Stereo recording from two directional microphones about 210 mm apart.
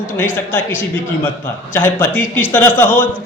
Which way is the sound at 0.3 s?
10° left (ahead or behind).